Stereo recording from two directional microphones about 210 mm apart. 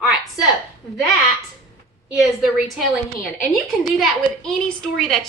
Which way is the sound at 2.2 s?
Centre (ahead or behind).